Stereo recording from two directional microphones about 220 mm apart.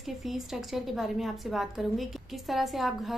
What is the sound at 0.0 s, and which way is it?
A woman's voice, centre (ahead or behind).